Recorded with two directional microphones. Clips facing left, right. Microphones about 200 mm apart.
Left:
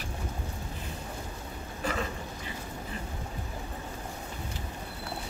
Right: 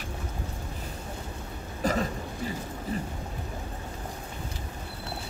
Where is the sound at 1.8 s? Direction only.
40° right (ahead or behind).